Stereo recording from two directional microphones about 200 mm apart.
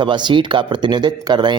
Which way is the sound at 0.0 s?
25° right (ahead or behind).